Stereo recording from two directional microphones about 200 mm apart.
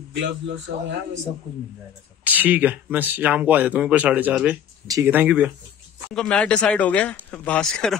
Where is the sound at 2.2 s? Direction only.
10° right (ahead or behind).